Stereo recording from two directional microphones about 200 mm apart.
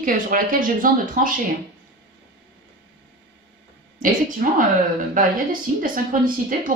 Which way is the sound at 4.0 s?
40° right (ahead or behind).